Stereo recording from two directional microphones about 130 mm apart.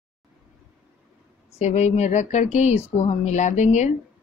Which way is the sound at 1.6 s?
60° left (ahead or behind).